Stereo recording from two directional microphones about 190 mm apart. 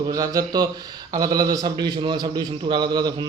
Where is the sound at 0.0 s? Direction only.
20° right (ahead or behind).